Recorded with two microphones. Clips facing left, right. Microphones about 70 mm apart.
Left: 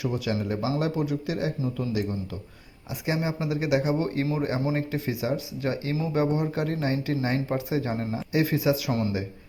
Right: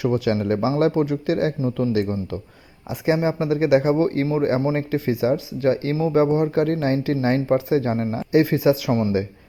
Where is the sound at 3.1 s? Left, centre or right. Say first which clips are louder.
Right 8 dB; right.